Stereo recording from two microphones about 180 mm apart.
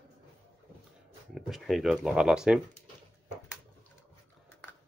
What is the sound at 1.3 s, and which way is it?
Speech, centre (ahead or behind).